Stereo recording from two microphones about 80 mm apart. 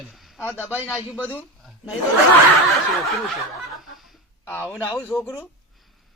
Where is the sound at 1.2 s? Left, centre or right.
Left.